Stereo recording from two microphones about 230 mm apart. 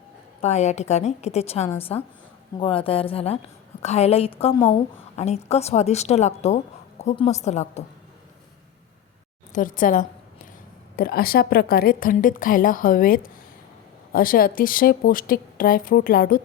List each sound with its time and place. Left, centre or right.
0.4 s a woman's voice: left
9.5 s a woman's voice: left